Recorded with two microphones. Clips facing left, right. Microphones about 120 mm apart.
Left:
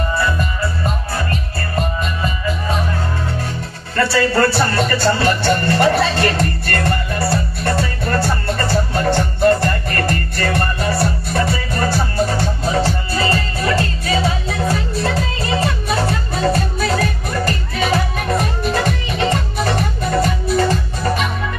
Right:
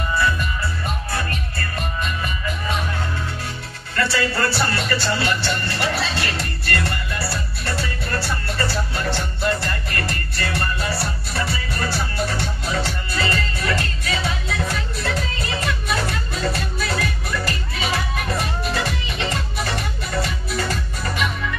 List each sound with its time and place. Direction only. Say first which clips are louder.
1.1 s music: left 4 dB; 30° left (ahead or behind)
4.7 s music: left 6 dB; 45° left (ahead or behind)